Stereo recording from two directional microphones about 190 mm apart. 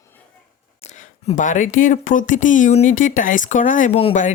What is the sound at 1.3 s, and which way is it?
Speech, 40° left (ahead or behind).